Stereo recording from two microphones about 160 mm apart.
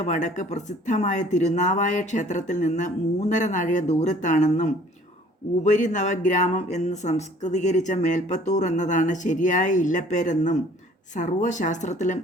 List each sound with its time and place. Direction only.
0.1 s speech: 50° left (ahead or behind)